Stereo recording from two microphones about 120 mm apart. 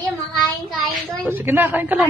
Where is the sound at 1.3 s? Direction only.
15° right (ahead or behind).